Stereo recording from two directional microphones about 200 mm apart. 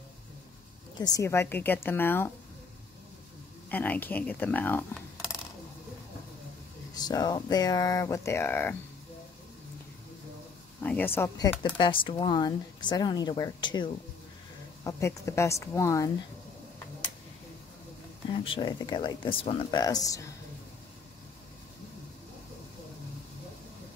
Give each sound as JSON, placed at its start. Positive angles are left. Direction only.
{"t": 0.9, "sound": "a woman's voice", "side_deg": 20}
{"t": 3.7, "sound": "a woman's voice", "side_deg": 10}
{"t": 7.0, "sound": "speech", "side_deg": 20}
{"t": 10.8, "sound": "a woman's voice", "side_deg": 10}
{"t": 18.4, "sound": "speech", "side_deg": 25}